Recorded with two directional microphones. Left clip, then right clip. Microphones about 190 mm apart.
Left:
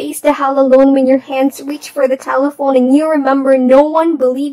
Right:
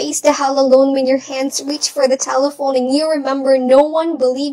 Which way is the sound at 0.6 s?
15° left (ahead or behind).